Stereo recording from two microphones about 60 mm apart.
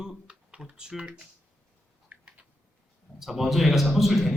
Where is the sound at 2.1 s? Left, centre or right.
Right.